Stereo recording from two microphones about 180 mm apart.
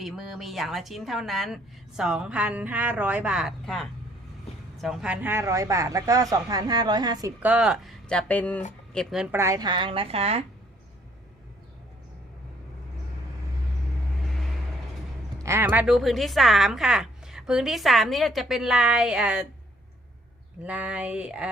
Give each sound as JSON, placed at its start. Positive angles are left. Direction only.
{"t": 0.0, "sound": "a woman's voice", "side_deg": 0}
{"t": 15.4, "sound": "a woman's voice", "side_deg": -15}
{"t": 20.7, "sound": "speech", "side_deg": -5}